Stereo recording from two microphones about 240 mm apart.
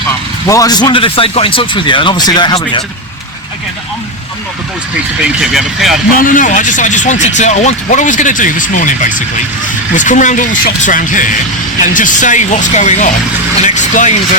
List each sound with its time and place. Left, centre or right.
0.4 s speech: centre
5.2 s speech: centre
6.1 s speech: left